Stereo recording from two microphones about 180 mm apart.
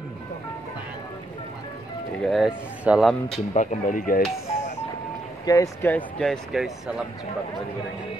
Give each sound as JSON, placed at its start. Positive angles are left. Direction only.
{"t": 2.2, "sound": "speech", "side_deg": 0}
{"t": 3.5, "sound": "speech", "side_deg": 50}
{"t": 5.4, "sound": "speech", "side_deg": 20}